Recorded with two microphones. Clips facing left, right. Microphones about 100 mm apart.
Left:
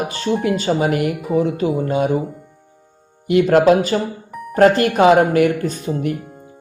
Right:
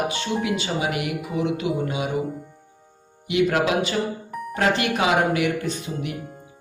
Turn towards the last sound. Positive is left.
turn(degrees=45)  # may be behind; listen again after turning